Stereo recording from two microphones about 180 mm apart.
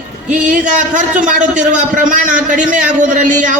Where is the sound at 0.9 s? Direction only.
45° right (ahead or behind).